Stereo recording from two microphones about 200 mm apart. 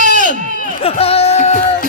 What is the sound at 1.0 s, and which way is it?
Music, 30° left (ahead or behind).